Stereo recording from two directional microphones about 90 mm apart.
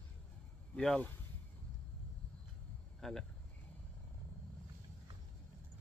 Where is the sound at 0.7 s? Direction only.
10° left (ahead or behind).